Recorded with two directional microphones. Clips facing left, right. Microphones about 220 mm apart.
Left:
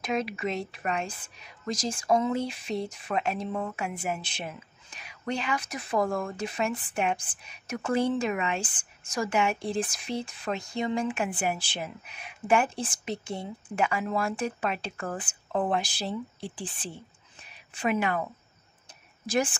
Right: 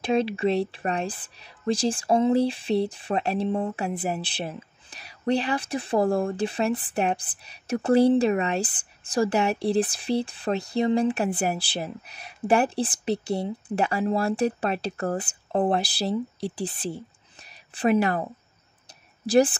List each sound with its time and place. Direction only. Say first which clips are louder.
0.0 s a woman's voice: right 7 dB; 30° right (ahead or behind)